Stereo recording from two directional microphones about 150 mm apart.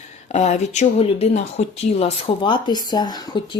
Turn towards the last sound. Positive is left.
turn(degrees=30)  # may be behind; listen again after turning